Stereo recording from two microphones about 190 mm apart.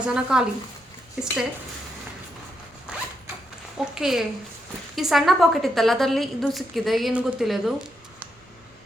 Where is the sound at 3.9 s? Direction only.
Centre (ahead or behind).